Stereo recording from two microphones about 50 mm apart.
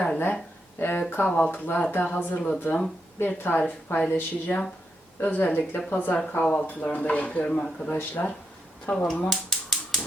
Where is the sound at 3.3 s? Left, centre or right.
Left.